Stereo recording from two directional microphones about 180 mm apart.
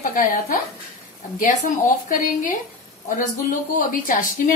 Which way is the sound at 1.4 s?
45° left (ahead or behind).